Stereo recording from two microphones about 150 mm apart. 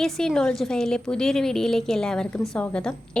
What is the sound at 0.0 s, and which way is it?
A woman's voice, 5° left (ahead or behind).